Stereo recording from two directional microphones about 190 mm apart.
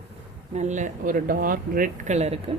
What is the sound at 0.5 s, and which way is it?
Speech, 40° right (ahead or behind).